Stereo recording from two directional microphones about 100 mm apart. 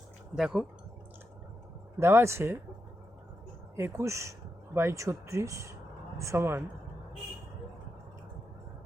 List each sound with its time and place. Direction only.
0.3 s speech: 5° right (ahead or behind)
2.0 s speech: 25° right (ahead or behind)
3.8 s speech: 25° right (ahead or behind)